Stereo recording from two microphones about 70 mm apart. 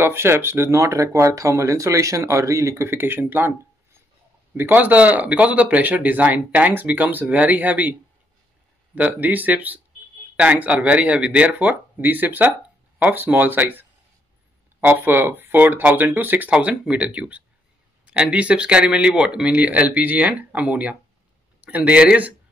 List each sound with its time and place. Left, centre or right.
0.0 s speech: right
4.6 s speech: right
8.9 s speech: right